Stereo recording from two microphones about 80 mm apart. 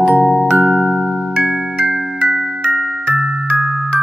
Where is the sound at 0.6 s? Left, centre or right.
Centre.